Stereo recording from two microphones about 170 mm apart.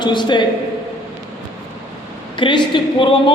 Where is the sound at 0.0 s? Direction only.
25° left (ahead or behind).